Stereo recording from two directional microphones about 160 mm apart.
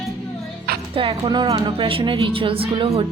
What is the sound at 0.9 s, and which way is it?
A woman's voice, 35° right (ahead or behind).